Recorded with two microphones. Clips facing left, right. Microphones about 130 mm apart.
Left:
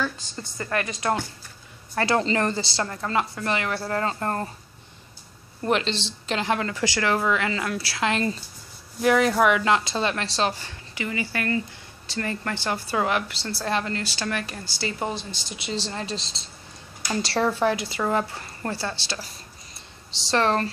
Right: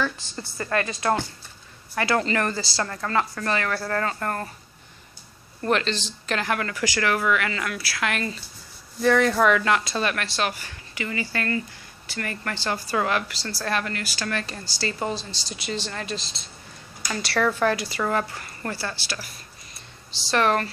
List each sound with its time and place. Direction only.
0.0 s a woman's voice: 20° left (ahead or behind)
5.6 s speech: 15° left (ahead or behind)
9.0 s speech: 10° left (ahead or behind); by 17.6 s 30° left (ahead or behind)
17.6 s speech: 20° left (ahead or behind)
20.2 s speech: 30° left (ahead or behind)